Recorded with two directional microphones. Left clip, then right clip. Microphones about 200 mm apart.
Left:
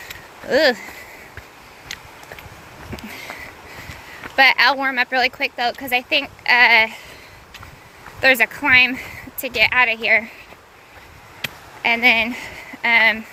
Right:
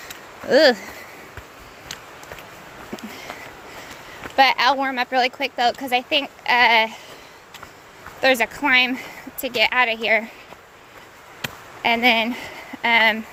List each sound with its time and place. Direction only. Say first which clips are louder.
0.4 s speech: right 2 dB; 15° right (ahead or behind)
1.9 s a sound: left 3 dB; 45° right (ahead or behind)
2.9 s a sound: left 2 dB; 5° right (ahead or behind)
4.4 s speech: left 2 dB; 5° right (ahead or behind)
8.2 s speech: left 3 dB; 5° right (ahead or behind)
11.8 s speech: left 2 dB; 15° right (ahead or behind)